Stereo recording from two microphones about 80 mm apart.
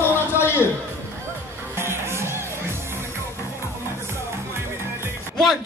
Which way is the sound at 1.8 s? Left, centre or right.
Right.